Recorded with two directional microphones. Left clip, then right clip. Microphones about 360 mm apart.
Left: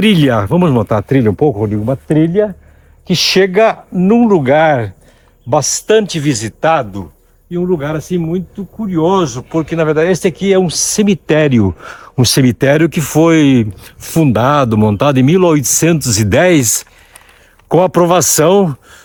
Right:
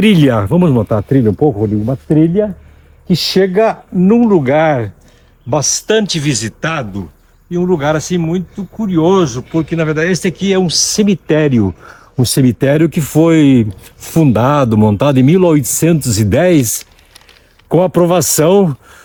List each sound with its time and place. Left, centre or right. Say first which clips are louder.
0.0 s speech: even; centre
1.4 s speech: even; left
3.1 s speech: left 2 dB; centre
7.5 s speech: right 3 dB; centre; by 12.2 s left
12.2 s speech: left 2 dB; centre